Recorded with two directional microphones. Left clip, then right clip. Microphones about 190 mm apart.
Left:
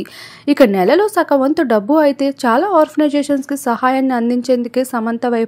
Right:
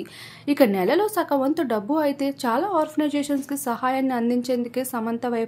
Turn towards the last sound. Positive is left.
turn(degrees=30)  # may be behind; listen again after turning